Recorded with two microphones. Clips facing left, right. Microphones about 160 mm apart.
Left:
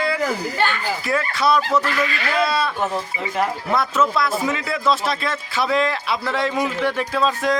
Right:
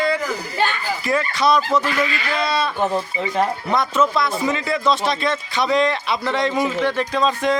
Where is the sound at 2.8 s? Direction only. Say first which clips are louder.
Right 3 dB; 15° right (ahead or behind).